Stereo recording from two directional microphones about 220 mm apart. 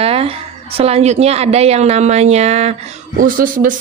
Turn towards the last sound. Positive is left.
turn(degrees=-40)  # may be behind; listen again after turning